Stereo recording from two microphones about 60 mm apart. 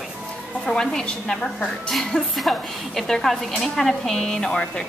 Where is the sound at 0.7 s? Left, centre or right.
Centre.